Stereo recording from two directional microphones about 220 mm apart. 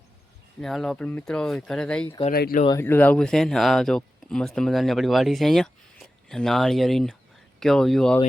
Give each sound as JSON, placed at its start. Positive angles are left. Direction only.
{"t": 0.6, "sound": "speech", "side_deg": 0}
{"t": 2.3, "sound": "speech", "side_deg": 40}
{"t": 2.6, "sound": "speech", "side_deg": 10}